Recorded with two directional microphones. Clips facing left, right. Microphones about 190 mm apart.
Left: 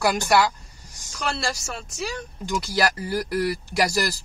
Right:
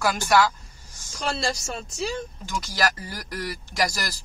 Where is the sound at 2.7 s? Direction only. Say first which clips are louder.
Left 4 dB; 10° left (ahead or behind).